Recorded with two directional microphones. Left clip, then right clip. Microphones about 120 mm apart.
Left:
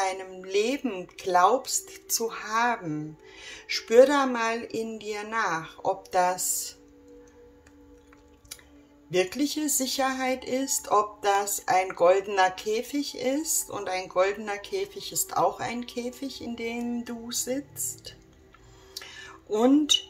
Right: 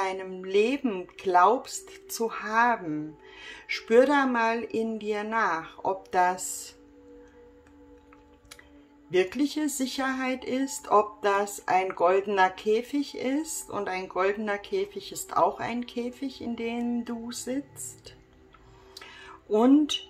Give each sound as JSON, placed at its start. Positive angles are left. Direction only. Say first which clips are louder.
{"t": 0.0, "sound": "speech", "louder": "left 1 dB", "side_deg": -35}
{"t": 9.1, "sound": "speech", "louder": "even", "side_deg": -40}
{"t": 18.9, "sound": "a sound", "louder": "left 3 dB", "side_deg": -35}